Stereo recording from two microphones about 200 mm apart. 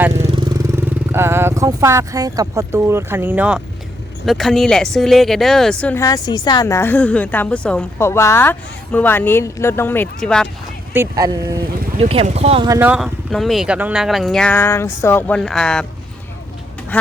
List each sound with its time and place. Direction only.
0.1 s vehicle: 30° right (ahead or behind)
0.8 s speech: 10° right (ahead or behind)
10.9 s speech: 15° right (ahead or behind)
11.9 s speech: 30° right (ahead or behind)
12.6 s speech: 15° right (ahead or behind); by 15.4 s 10° left (ahead or behind)
15.4 s speech: centre (ahead or behind)
16.9 s speech: 5° left (ahead or behind)